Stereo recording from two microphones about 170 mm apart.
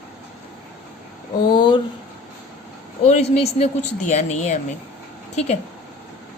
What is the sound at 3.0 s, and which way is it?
A woman's voice, 40° left (ahead or behind).